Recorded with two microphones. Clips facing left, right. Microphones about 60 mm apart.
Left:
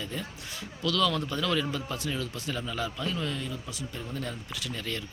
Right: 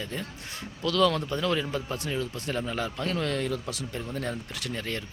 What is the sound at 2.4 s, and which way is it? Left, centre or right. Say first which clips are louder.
A man's voice: right 2 dB; right.